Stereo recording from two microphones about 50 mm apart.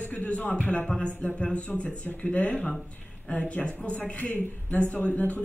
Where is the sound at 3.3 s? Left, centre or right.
Left.